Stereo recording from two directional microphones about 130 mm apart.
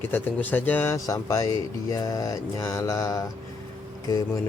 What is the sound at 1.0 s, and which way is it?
A man's voice, 25° left (ahead or behind).